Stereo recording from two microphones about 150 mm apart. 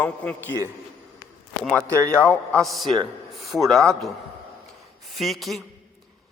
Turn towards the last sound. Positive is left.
turn(degrees=0)  # may be behind; listen again after turning